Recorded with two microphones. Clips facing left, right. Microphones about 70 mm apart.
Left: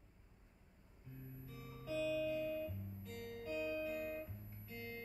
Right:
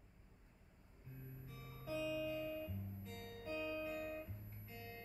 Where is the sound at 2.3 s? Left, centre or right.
Right.